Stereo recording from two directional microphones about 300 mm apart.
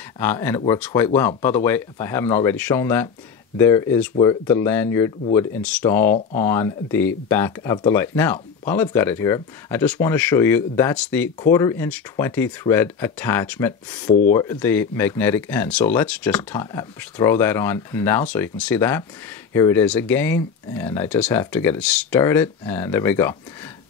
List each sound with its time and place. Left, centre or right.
0.2 s speech: centre